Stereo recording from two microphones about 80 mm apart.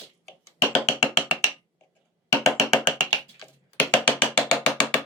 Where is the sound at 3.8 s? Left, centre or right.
Centre.